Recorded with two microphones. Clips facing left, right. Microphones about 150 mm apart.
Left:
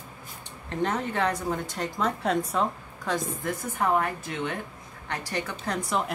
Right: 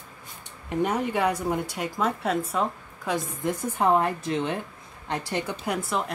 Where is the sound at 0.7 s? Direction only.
10° right (ahead or behind).